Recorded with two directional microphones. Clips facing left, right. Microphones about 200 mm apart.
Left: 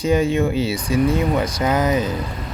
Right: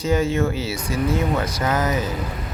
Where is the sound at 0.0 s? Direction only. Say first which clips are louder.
Left 3 dB; 15° left (ahead or behind).